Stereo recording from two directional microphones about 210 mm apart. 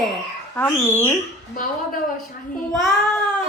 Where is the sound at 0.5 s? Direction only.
10° left (ahead or behind).